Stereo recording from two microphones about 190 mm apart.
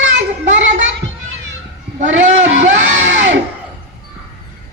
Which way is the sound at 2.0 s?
75° right (ahead or behind).